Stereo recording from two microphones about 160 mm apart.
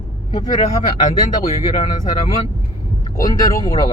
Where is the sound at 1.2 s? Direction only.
30° left (ahead or behind).